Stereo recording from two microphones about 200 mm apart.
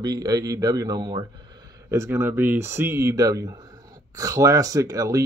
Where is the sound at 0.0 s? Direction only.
20° right (ahead or behind).